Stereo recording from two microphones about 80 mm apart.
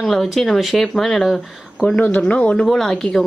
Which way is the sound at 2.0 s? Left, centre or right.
Centre.